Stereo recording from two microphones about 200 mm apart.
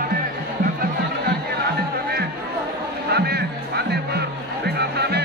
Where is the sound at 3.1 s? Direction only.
55° right (ahead or behind).